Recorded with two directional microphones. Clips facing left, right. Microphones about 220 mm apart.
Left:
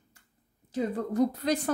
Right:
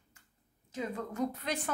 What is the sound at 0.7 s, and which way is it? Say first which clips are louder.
A woman's voice: left 8 dB; 35° left (ahead or behind).